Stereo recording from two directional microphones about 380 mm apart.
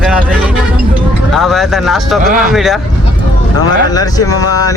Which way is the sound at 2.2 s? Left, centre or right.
Right.